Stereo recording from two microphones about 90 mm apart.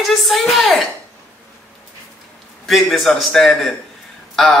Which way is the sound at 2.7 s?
Centre (ahead or behind).